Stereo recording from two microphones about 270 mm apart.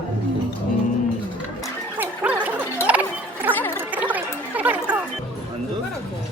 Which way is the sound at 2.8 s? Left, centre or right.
Centre.